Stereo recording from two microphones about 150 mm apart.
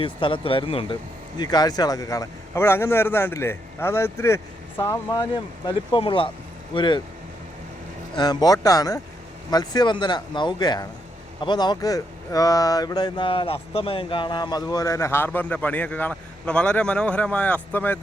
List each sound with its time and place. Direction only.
0.0 s speech: 35° left (ahead or behind)
1.4 s a man's voice: 25° left (ahead or behind)
5.3 s speech: 35° left (ahead or behind)
8.1 s speech: 25° left (ahead or behind); by 18.0 s 10° left (ahead or behind)